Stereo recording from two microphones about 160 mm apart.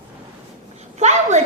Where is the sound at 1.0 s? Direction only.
45° right (ahead or behind).